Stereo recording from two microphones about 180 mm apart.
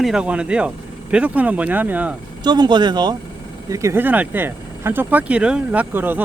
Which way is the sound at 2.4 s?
25° right (ahead or behind).